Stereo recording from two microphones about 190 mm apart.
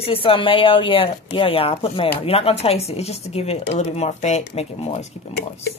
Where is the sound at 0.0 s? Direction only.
30° left (ahead or behind).